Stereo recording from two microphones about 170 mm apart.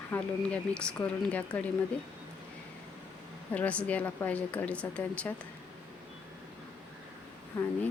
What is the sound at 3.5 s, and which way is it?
A woman's voice, 10° left (ahead or behind).